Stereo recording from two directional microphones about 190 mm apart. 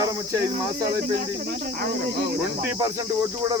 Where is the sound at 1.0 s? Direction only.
55° right (ahead or behind).